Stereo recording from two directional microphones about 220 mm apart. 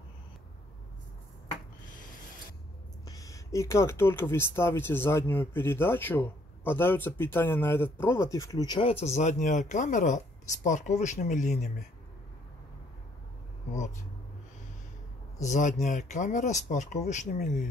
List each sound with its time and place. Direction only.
3.1 s speech: 15° left (ahead or behind)
9.0 s speech: 30° left (ahead or behind)
15.4 s speech: 35° left (ahead or behind)